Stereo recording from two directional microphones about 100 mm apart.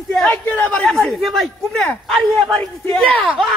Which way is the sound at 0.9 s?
5° left (ahead or behind).